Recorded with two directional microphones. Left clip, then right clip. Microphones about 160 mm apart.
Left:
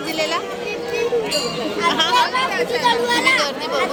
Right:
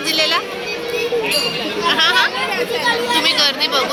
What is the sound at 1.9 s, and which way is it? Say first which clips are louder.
Speech: right 3 dB; 20° left (ahead or behind).